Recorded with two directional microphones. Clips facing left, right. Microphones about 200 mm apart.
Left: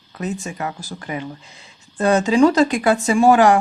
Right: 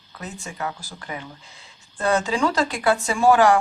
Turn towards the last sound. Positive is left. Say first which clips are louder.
# left 3 dB
turn(degrees=20)  # may be behind; listen again after turning